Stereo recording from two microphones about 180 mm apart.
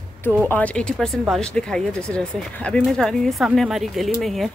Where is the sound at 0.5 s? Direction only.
10° left (ahead or behind).